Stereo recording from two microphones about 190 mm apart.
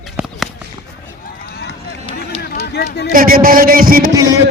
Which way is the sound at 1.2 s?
55° left (ahead or behind).